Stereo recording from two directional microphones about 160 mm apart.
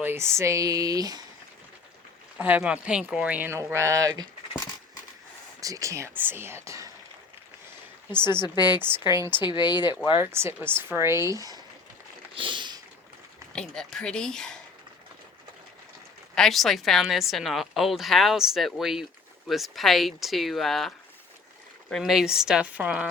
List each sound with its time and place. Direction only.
0.0 s speech: 15° right (ahead or behind)
2.4 s speech: 10° right (ahead or behind); by 4.3 s 25° right (ahead or behind)
5.5 s speech: 20° right (ahead or behind)
8.2 s speech: 25° left (ahead or behind)
10.2 s speech: 15° right (ahead or behind)
12.3 s a sound: 30° right (ahead or behind)
13.6 s a woman's voice: 5° left (ahead or behind)
16.3 s a woman's voice: centre (ahead or behind)